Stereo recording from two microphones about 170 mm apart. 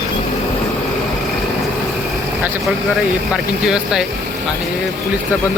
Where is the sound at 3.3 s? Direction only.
5° right (ahead or behind).